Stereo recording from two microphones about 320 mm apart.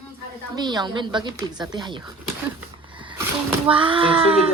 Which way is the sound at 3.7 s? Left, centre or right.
Centre.